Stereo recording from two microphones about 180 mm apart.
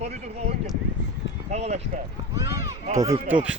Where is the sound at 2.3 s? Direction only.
15° right (ahead or behind).